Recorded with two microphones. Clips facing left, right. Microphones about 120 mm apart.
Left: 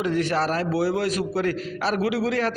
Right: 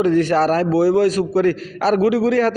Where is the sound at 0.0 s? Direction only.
40° right (ahead or behind).